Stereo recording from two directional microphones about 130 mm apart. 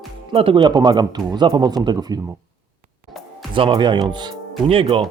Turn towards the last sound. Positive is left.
turn(degrees=-45)  # may be behind; listen again after turning